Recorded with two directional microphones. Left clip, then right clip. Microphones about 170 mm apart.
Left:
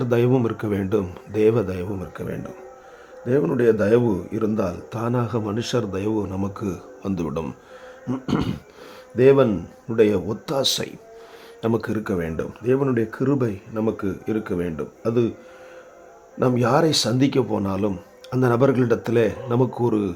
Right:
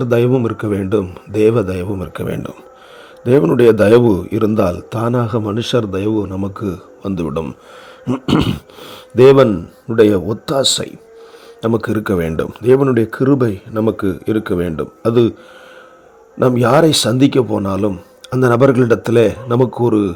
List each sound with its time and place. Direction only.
0.0 s speech: 25° right (ahead or behind)
2.1 s a man's voice: 50° right (ahead or behind); by 7.5 s 25° right (ahead or behind)
8.0 s speech: 45° right (ahead or behind)
9.5 s a man's voice: 40° right (ahead or behind)
16.4 s a man's voice: 40° right (ahead or behind)